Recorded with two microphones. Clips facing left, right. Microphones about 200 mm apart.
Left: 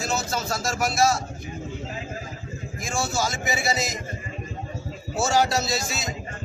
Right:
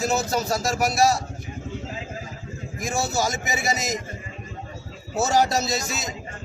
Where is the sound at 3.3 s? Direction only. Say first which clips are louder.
Even; 40° right (ahead or behind).